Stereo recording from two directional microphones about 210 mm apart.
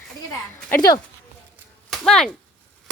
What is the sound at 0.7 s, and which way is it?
Speech, 15° left (ahead or behind).